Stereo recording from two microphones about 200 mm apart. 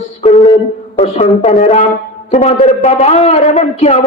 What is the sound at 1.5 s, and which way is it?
A man's voice, 40° left (ahead or behind).